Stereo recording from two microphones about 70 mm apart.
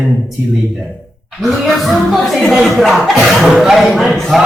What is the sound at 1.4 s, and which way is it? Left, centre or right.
A man's voice, centre.